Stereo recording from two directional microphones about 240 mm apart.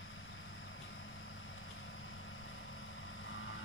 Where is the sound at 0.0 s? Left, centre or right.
Left.